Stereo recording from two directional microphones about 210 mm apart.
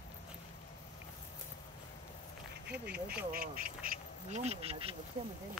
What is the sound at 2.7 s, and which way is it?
Speech, 50° right (ahead or behind).